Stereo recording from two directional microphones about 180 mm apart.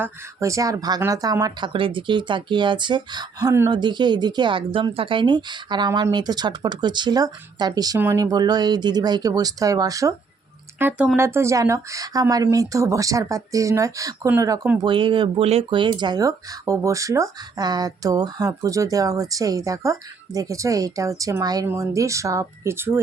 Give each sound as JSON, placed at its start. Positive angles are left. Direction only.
{"t": 0.0, "sound": "speech", "side_deg": -15}
{"t": 14.8, "sound": "speech", "side_deg": -25}